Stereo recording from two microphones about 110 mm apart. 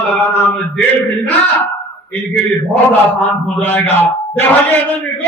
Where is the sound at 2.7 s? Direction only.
15° left (ahead or behind).